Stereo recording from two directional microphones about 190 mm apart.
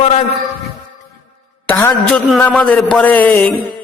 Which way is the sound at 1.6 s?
5° left (ahead or behind).